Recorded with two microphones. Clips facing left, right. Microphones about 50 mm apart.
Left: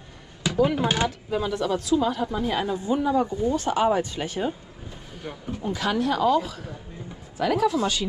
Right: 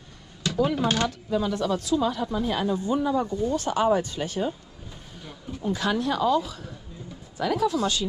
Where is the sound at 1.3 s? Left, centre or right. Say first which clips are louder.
Even; left.